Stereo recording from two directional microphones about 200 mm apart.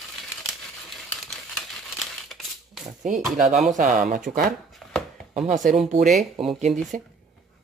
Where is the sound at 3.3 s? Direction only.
35° right (ahead or behind).